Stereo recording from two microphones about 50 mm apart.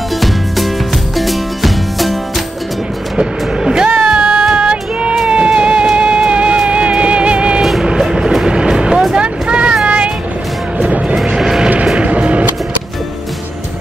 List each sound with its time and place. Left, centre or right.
1.1 s music: centre
3.2 s music: centre
7.8 s vehicle: centre
9.8 s music: right
10.8 s vehicle: right
11.1 s vehicle: centre
11.8 s music: centre
12.1 s music: right